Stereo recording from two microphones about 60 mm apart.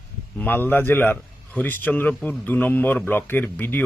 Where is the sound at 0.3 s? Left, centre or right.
Left.